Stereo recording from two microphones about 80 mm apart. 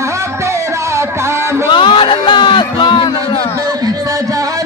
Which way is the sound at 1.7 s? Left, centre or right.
Left.